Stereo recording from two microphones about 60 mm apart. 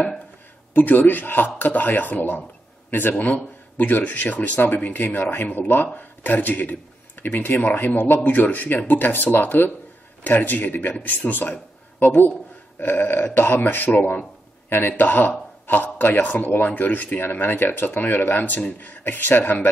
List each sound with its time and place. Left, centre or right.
0.7 s a man's voice: left